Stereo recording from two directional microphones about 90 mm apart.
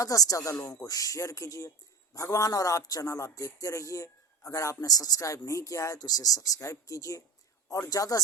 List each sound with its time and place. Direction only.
0.0 s speech: 40° left (ahead or behind)